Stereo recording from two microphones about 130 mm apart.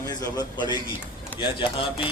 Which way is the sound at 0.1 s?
30° left (ahead or behind).